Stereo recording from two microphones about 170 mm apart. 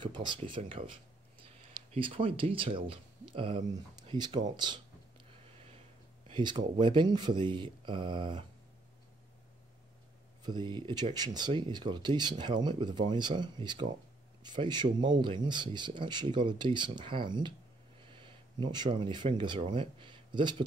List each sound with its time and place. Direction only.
0.0 s speech: 25° right (ahead or behind)
5.3 s a sound: 35° right (ahead or behind)
6.8 s speech: 30° right (ahead or behind)
10.4 s speech: 25° right (ahead or behind)